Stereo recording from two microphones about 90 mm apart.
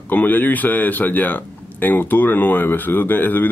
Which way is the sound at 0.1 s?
20° left (ahead or behind).